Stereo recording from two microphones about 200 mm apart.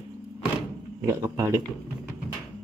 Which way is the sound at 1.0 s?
15° right (ahead or behind).